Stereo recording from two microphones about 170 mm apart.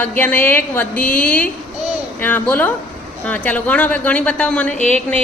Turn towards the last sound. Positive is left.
turn(degrees=5)  # may be behind; listen again after turning